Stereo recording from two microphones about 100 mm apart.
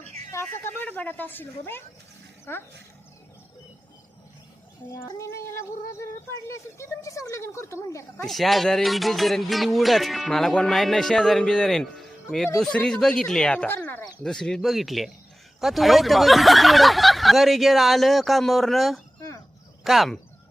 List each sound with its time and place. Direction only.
0.0 s a sound: 90° right
0.3 s speech: 25° left (ahead or behind)
5.0 s speech: 30° left (ahead or behind)
8.2 s speech: centre (ahead or behind)
13.7 s speech: 20° left (ahead or behind)
14.0 s speech: 5° left (ahead or behind)